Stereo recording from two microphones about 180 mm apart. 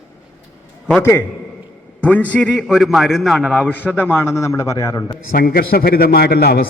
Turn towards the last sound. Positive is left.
turn(degrees=60)  # may be behind; listen again after turning